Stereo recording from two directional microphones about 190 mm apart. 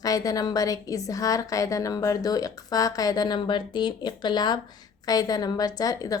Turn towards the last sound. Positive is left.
turn(degrees=20)  # may be behind; listen again after turning